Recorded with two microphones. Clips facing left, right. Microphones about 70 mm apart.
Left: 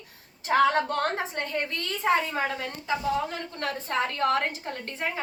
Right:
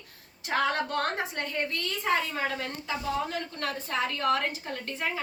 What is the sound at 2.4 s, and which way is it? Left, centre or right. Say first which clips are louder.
Speech: left 2 dB; centre.